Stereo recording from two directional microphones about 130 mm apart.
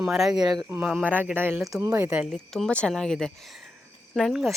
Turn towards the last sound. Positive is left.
turn(degrees=0)  # may be behind; listen again after turning